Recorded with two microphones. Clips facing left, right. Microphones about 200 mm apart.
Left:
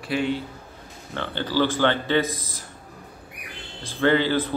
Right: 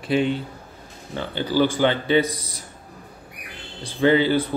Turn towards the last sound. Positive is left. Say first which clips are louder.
# right 3 dB
turn(degrees=-15)  # may be behind; listen again after turning